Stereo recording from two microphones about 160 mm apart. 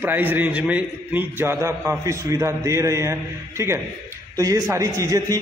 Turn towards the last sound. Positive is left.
turn(degrees=-20)  # may be behind; listen again after turning